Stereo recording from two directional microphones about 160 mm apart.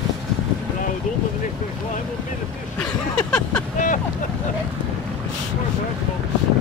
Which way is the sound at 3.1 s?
5° left (ahead or behind).